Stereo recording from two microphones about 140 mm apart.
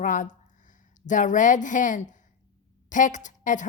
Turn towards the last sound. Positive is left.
turn(degrees=65)  # may be behind; listen again after turning